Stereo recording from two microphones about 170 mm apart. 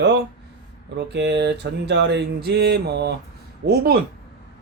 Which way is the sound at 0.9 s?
85° right.